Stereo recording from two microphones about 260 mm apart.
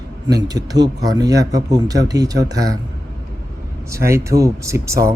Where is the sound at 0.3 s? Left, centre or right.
Centre.